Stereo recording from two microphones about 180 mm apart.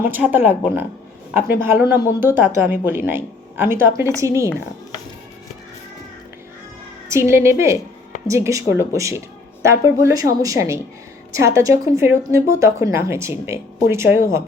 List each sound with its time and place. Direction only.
0.0 s a woman's voice: 10° right (ahead or behind)
7.1 s a woman's voice: 15° right (ahead or behind)